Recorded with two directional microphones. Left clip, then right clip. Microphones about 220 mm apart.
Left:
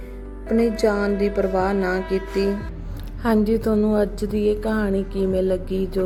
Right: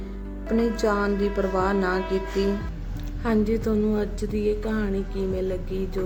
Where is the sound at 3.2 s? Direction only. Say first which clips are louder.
Left 4 dB; 20° left (ahead or behind).